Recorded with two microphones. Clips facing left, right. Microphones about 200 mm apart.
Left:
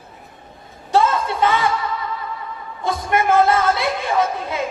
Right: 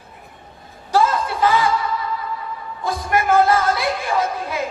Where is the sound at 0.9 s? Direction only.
25° left (ahead or behind).